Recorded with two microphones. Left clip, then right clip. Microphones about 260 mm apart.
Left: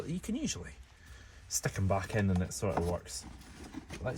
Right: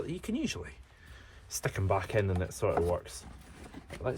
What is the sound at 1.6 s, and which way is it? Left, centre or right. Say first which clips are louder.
Speech: right 4 dB; right.